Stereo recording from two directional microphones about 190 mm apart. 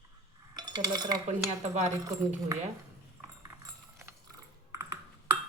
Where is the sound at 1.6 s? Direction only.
35° right (ahead or behind).